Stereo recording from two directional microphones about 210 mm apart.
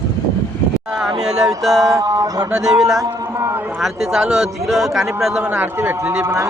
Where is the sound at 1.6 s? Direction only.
Centre (ahead or behind).